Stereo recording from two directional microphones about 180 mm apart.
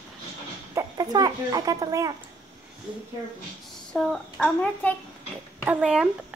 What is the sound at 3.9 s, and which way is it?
Speech, 5° left (ahead or behind).